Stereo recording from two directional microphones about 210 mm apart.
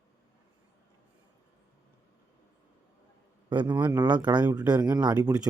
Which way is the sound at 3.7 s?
10° right (ahead or behind).